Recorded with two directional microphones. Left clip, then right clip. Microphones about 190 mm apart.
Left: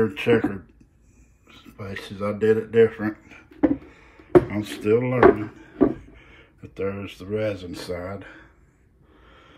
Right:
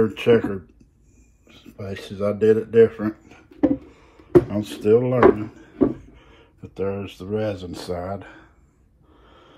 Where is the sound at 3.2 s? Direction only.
55° right (ahead or behind).